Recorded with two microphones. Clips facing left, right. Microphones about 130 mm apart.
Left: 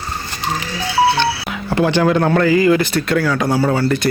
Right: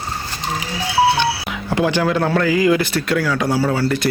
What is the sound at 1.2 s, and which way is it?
A man's voice, 10° right (ahead or behind).